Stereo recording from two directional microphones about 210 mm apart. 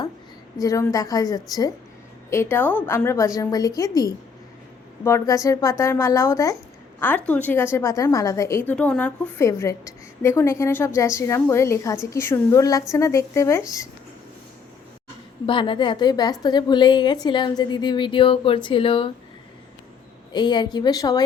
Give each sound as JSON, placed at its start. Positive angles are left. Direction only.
{"t": 0.6, "sound": "a woman's voice", "side_deg": 15}
{"t": 15.4, "sound": "a woman's voice", "side_deg": 25}
{"t": 20.3, "sound": "a woman's voice", "side_deg": 20}